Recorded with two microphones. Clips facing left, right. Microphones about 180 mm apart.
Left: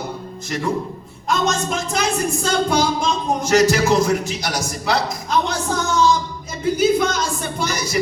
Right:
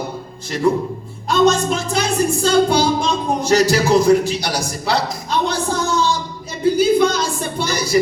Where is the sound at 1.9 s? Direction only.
30° right (ahead or behind).